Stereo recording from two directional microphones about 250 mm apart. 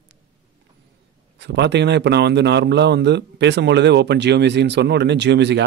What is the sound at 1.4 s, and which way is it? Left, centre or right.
Speech, right.